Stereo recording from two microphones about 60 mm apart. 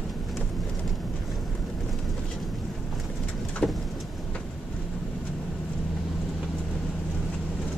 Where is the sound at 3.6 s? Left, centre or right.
Centre.